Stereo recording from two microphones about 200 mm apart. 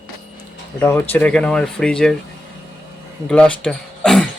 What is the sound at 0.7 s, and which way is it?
Speech, 10° left (ahead or behind).